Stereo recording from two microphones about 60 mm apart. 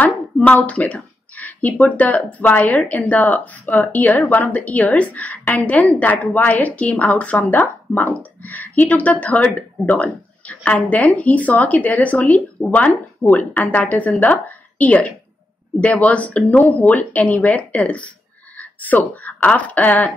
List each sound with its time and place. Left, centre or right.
0.0 s speech: left